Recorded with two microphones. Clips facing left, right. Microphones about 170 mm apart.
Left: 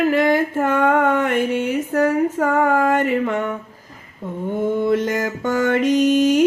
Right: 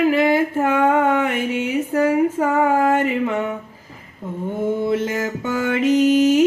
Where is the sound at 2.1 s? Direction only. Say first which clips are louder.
Right 1 dB; 10° right (ahead or behind).